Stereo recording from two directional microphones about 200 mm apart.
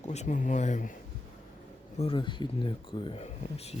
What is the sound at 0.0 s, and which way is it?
Speech, 35° left (ahead or behind).